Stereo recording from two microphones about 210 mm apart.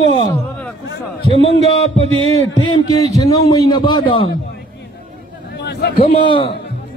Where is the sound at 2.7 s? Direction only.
20° left (ahead or behind).